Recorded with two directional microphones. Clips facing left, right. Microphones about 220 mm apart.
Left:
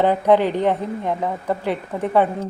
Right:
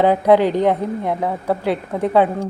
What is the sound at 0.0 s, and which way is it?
A woman's voice, 10° right (ahead or behind).